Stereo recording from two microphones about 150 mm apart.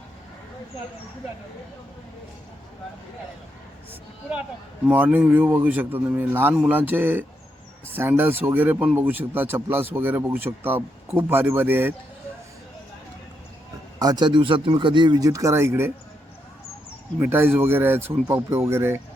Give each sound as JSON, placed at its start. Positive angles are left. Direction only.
{"t": 4.9, "sound": "speech", "side_deg": -10}
{"t": 14.0, "sound": "speech", "side_deg": -25}
{"t": 17.2, "sound": "speech", "side_deg": -15}